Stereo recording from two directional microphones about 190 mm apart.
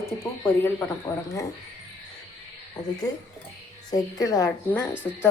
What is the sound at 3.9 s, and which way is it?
Speech, 20° left (ahead or behind).